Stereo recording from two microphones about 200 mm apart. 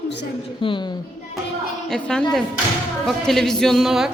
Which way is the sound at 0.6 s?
25° left (ahead or behind).